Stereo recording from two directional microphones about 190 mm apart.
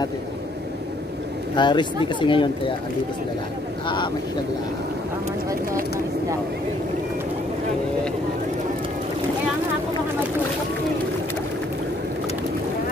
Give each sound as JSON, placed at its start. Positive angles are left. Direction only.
{"t": 1.5, "sound": "speech", "side_deg": 25}
{"t": 3.8, "sound": "speech", "side_deg": 25}